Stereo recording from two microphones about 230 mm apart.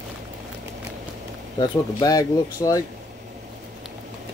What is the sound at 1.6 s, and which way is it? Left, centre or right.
Speech, centre.